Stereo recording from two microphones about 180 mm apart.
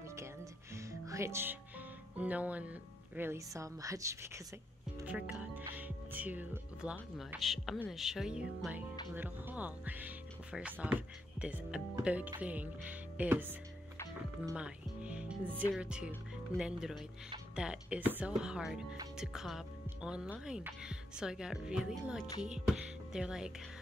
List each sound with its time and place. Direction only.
0.7 s music: 15° right (ahead or behind)
2.1 s speech: 10° right (ahead or behind)
14.5 s music: 5° right (ahead or behind)
15.8 s speech: 5° right (ahead or behind)